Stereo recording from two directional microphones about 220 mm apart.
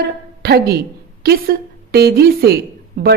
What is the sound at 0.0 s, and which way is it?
A woman's voice, 45° right (ahead or behind).